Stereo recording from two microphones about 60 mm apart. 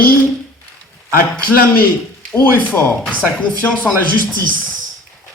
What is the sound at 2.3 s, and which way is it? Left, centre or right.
Speech, left.